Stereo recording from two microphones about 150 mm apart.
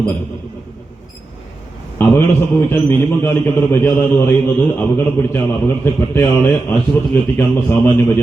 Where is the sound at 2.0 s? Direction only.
15° left (ahead or behind).